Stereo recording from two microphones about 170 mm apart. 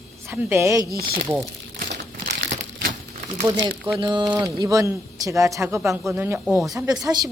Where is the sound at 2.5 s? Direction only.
45° right (ahead or behind).